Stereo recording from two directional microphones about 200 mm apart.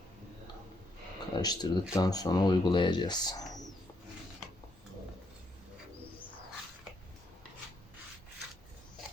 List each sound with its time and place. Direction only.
1.4 s speech: 20° left (ahead or behind)